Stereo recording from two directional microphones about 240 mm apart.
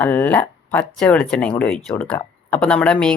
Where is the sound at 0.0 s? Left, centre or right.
Centre.